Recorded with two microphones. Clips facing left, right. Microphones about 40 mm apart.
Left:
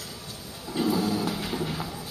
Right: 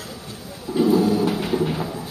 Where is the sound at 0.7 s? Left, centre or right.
Centre.